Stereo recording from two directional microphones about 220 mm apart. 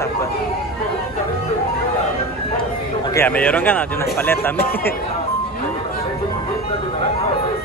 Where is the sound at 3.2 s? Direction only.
10° left (ahead or behind).